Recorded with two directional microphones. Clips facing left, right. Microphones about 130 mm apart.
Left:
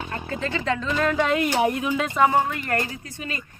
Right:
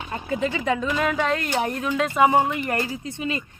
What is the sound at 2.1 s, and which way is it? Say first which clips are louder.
Speech: right 2 dB; 15° right (ahead or behind).